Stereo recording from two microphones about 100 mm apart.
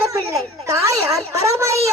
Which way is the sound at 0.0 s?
30° right (ahead or behind).